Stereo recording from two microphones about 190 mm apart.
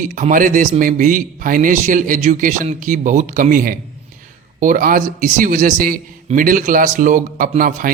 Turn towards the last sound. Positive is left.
turn(degrees=-45)  # may be behind; listen again after turning